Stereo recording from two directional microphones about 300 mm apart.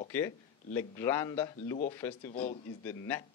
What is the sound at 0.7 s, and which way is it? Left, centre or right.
A man's voice, centre.